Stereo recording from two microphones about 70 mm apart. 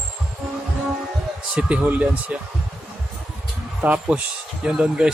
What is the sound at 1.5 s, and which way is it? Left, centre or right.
Speech, right.